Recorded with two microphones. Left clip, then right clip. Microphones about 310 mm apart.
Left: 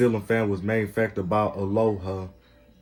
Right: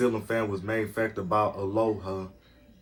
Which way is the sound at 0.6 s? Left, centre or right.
Left.